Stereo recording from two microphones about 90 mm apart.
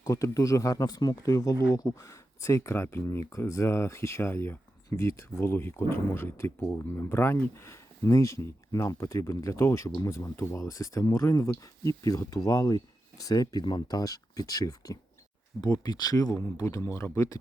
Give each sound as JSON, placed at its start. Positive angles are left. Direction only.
{"t": 0.0, "sound": "speech", "side_deg": 40}